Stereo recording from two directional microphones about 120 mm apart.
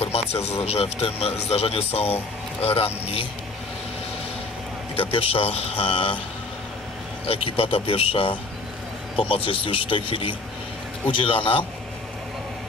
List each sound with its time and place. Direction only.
0.0 s speech: 60° left (ahead or behind)
5.1 s speech: 50° left (ahead or behind)
7.2 s speech: 50° left (ahead or behind)